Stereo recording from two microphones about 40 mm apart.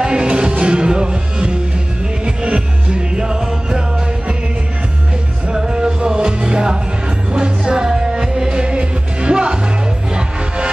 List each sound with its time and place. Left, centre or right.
0.0 s music: right
5.5 s music: centre